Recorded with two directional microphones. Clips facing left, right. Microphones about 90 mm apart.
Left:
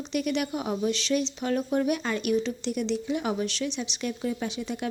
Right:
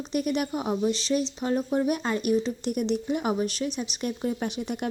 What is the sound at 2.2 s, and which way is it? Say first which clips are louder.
Speech: right 1 dB; 45° right (ahead or behind).